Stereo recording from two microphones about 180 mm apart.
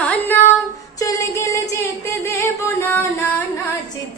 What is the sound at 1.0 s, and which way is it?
Music, 15° left (ahead or behind).